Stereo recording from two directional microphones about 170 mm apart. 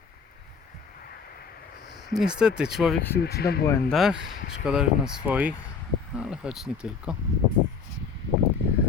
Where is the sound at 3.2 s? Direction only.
70° left (ahead or behind).